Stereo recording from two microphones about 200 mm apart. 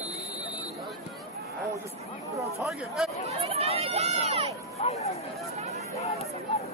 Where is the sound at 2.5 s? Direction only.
Centre (ahead or behind).